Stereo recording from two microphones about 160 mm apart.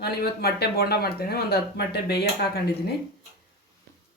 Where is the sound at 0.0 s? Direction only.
85° left.